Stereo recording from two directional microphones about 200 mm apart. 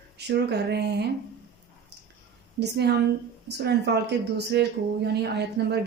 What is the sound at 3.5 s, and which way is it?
Speech, 55° right (ahead or behind).